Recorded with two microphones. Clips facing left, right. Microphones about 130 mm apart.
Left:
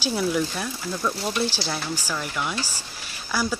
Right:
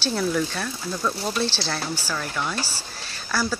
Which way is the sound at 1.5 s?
15° left (ahead or behind).